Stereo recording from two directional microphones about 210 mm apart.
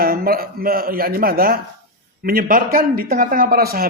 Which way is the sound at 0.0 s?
45° right (ahead or behind).